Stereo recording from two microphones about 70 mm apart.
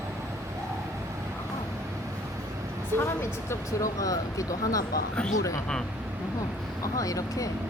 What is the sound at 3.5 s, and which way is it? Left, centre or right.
Speech, left.